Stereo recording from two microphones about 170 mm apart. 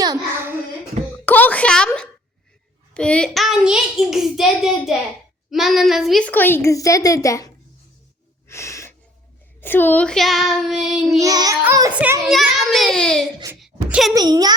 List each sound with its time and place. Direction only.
0.0 s a sound: 20° right (ahead or behind)
1.2 s a sound: 10° left (ahead or behind)
2.9 s a child's voice: 5° left (ahead or behind)
8.4 s wheeze: 15° left (ahead or behind)
9.6 s a child's voice: 10° left (ahead or behind)
11.2 s a child's voice: 20° right (ahead or behind)
11.6 s child singing: 15° right (ahead or behind)
12.7 s a child's voice: centre (ahead or behind)
13.6 s a sound: centre (ahead or behind)
14.1 s a child's voice: 25° right (ahead or behind)